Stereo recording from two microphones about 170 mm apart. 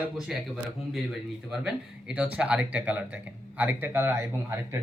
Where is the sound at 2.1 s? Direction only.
5° right (ahead or behind).